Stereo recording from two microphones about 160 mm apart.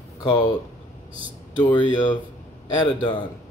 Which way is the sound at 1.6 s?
30° left (ahead or behind).